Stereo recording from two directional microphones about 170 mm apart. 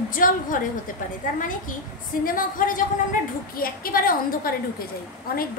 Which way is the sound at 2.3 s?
55° left (ahead or behind).